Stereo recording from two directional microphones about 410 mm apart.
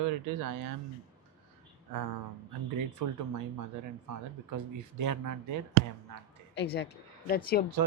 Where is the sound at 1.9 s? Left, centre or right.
Right.